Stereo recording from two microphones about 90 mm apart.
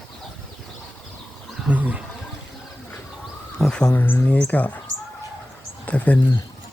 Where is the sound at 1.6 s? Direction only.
15° right (ahead or behind).